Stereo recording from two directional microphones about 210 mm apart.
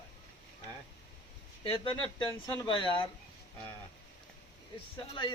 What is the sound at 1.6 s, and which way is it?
Speech, 25° left (ahead or behind).